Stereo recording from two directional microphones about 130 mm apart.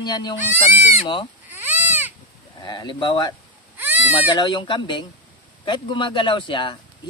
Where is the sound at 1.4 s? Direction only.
15° right (ahead or behind).